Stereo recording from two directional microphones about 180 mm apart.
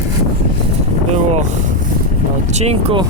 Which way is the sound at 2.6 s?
35° right (ahead or behind).